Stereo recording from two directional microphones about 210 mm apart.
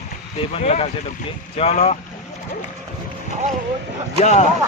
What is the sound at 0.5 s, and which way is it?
Speech, 30° left (ahead or behind).